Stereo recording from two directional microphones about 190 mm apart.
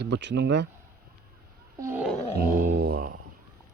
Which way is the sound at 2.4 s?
50° right (ahead or behind).